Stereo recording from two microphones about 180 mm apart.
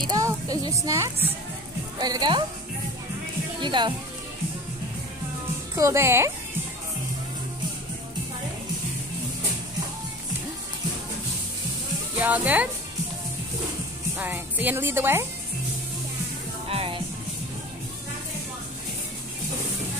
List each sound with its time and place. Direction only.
0.1 s a woman's voice: 20° right (ahead or behind)
3.6 s a woman's voice: 25° right (ahead or behind)
5.8 s speech: 15° right (ahead or behind)
12.2 s speech: 10° right (ahead or behind)
14.1 s speech: 10° right (ahead or behind)
16.6 s music: 30° right (ahead or behind)